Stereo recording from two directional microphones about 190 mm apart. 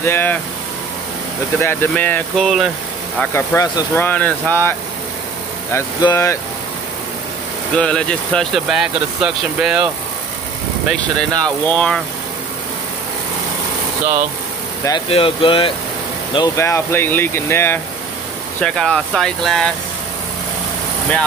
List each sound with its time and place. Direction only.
0.0 s speech: 10° left (ahead or behind)
1.6 s speech: 10° left (ahead or behind)
3.2 s speech: 15° left (ahead or behind)
7.7 s speech: 5° left (ahead or behind)
11.0 s speech: 5° left (ahead or behind)
15.0 s speech: 30° left (ahead or behind)
16.3 s speech: 15° left (ahead or behind)